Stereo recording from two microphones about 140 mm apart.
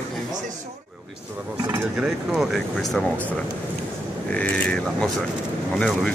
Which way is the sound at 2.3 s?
Centre (ahead or behind).